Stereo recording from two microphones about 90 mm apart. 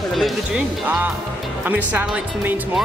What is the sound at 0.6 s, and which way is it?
Speech, 15° right (ahead or behind).